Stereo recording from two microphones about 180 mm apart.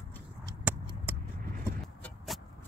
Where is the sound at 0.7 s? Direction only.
10° right (ahead or behind).